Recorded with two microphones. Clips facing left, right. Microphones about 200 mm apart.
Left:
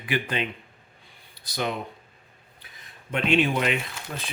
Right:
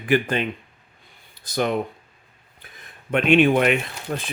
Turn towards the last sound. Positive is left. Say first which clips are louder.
# right 6 dB
turn(degrees=-50)  # may be behind; listen again after turning